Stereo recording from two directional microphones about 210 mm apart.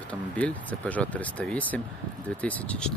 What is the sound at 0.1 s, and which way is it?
Speech, 5° left (ahead or behind).